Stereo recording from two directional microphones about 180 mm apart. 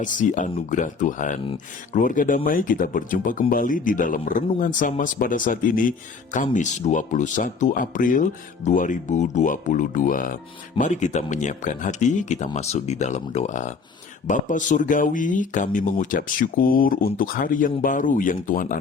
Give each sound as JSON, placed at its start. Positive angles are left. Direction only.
{"t": 0.0, "sound": "speech", "side_deg": 45}